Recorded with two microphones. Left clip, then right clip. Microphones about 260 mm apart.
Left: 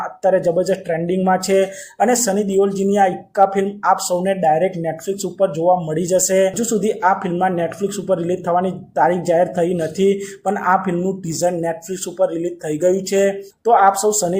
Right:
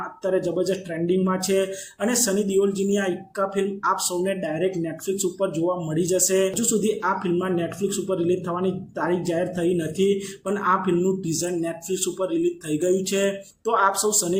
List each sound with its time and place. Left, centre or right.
0.3 s speech: centre